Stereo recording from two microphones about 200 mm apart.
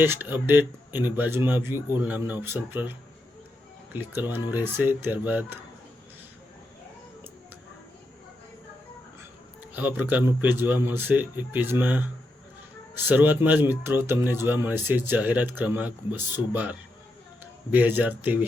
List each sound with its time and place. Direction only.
0.0 s speech: 10° right (ahead or behind)
3.9 s speech: 10° right (ahead or behind)
9.7 s speech: 10° right (ahead or behind)
13.1 s speech: 10° right (ahead or behind)